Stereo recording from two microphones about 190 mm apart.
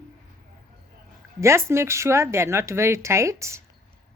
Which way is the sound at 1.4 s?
15° right (ahead or behind).